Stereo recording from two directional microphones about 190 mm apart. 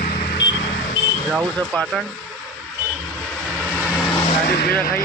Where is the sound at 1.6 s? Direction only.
Centre (ahead or behind).